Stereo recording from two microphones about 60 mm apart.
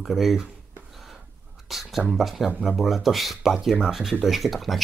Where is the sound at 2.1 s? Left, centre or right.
Centre.